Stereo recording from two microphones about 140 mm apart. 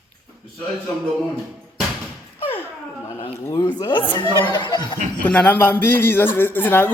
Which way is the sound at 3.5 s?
25° left (ahead or behind).